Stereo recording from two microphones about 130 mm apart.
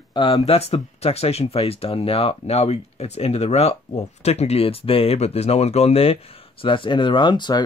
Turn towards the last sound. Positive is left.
turn(degrees=35)  # may be behind; listen again after turning